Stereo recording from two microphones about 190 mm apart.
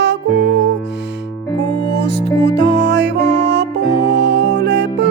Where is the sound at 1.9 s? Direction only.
65° right (ahead or behind).